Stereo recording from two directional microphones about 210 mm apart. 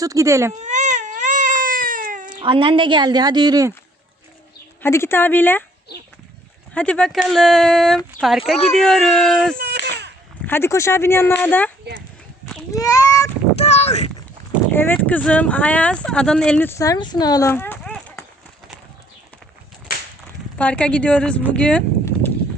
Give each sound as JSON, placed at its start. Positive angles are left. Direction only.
{"t": 0.0, "sound": "speech", "side_deg": -15}
{"t": 0.5, "sound": "baby cry", "side_deg": -35}
{"t": 2.3, "sound": "a woman's voice", "side_deg": -25}
{"t": 4.8, "sound": "speech", "side_deg": 10}
{"t": 6.7, "sound": "speech", "side_deg": 5}
{"t": 9.6, "sound": "a sound", "side_deg": -50}
{"t": 10.4, "sound": "speech", "side_deg": 10}
{"t": 12.7, "sound": "a sound", "side_deg": 15}
{"t": 13.6, "sound": "speech", "side_deg": 30}
{"t": 14.7, "sound": "speech", "side_deg": 10}
{"t": 20.6, "sound": "speech", "side_deg": 5}
{"t": 21.5, "sound": "a sound", "side_deg": 5}